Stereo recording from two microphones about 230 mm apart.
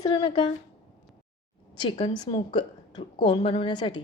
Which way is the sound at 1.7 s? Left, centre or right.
Left.